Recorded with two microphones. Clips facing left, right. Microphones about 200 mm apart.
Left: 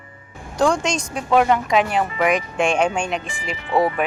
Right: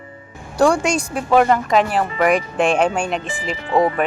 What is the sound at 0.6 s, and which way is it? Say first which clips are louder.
Speech: right 3 dB; 10° right (ahead or behind).